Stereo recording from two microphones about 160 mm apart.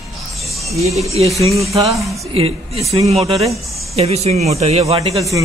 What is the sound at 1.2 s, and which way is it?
Speech, 40° right (ahead or behind).